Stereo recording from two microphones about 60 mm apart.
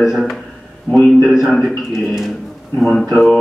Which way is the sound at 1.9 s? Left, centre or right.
Centre.